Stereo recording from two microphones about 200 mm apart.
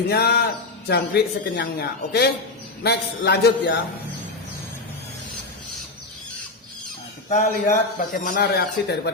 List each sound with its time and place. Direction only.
0.1 s speech: 50° left (ahead or behind)
7.3 s speech: 40° left (ahead or behind)